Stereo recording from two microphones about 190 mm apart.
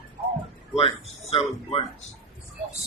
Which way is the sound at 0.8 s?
30° left (ahead or behind).